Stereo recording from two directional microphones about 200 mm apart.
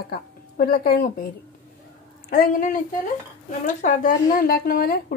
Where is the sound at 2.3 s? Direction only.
45° left (ahead or behind).